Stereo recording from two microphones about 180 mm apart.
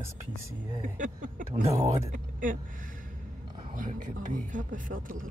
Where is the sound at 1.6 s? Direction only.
35° right (ahead or behind).